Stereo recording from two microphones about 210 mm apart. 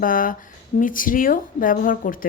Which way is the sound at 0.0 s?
40° left (ahead or behind).